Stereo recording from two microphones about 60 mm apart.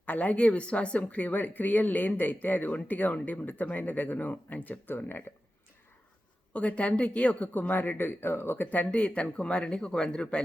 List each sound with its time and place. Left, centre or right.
0.0 s speech: left
6.5 s speech: left